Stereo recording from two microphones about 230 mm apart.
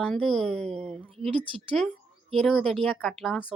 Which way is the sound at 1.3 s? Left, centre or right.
Right.